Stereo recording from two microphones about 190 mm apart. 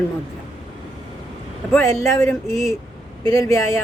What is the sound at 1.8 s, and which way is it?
A woman's voice, 15° left (ahead or behind).